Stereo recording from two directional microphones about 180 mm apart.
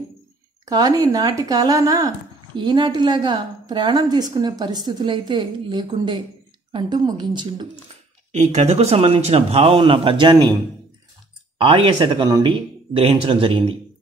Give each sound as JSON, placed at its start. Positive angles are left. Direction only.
{"t": 0.7, "sound": "speech", "side_deg": -20}
{"t": 8.3, "sound": "speech", "side_deg": -40}
{"t": 11.5, "sound": "speech", "side_deg": -30}